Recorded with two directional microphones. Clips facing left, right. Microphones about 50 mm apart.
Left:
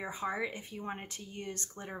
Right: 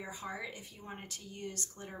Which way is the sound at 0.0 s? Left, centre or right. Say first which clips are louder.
Left 6 dB; left.